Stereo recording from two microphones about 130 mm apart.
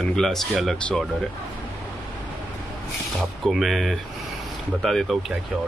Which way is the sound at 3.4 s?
Centre (ahead or behind).